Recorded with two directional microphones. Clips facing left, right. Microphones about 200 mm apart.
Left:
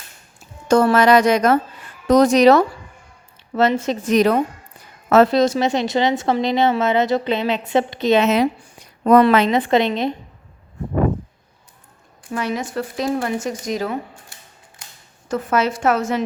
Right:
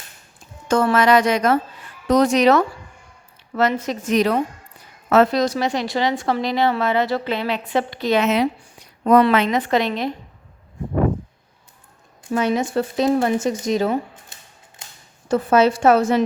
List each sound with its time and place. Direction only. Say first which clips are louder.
0.7 s a woman's voice: left 3 dB; 40° left (ahead or behind)
4.1 s a woman's voice: left 2 dB; 45° left (ahead or behind)
5.3 s a woman's voice: left 3 dB; 25° left (ahead or behind)
9.0 s speech: left 2 dB; 45° left (ahead or behind)
9.5 s a woman's voice: left 3 dB; 25° left (ahead or behind)
12.3 s a woman's voice: right 4 dB; 25° right (ahead or behind)